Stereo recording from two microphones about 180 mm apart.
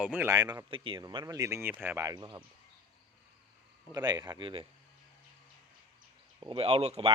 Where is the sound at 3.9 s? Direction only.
20° right (ahead or behind).